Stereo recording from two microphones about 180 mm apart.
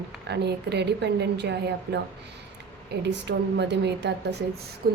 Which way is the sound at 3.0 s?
70° right (ahead or behind).